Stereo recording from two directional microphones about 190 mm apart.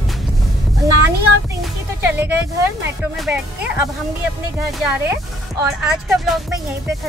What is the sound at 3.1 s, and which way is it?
Speech, 5° right (ahead or behind).